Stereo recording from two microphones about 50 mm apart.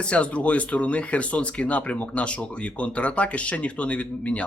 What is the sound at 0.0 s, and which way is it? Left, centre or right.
Speech, left.